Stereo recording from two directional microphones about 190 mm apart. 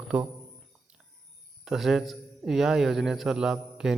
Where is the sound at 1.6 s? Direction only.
Centre (ahead or behind).